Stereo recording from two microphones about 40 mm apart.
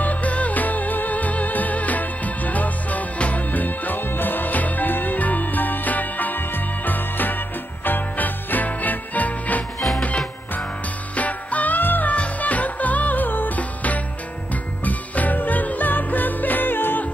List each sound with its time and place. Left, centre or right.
0.0 s music: left
11.1 s music: left
12.1 s music: left
13.6 s music: left